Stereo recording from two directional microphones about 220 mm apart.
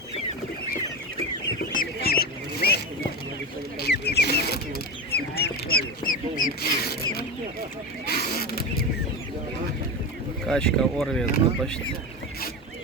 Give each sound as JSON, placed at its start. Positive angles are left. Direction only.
{"t": 1.7, "sound": "fowl", "side_deg": 40}
{"t": 2.6, "sound": "zipper", "side_deg": 45}
{"t": 3.8, "sound": "a sound", "side_deg": 45}
{"t": 5.1, "sound": "duck", "side_deg": 45}
{"t": 6.6, "sound": "rodents", "side_deg": 45}
{"t": 8.0, "sound": "a sound", "side_deg": 45}
{"t": 10.4, "sound": "speech", "side_deg": 5}